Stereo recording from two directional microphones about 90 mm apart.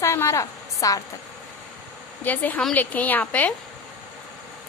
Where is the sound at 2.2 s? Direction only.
20° left (ahead or behind).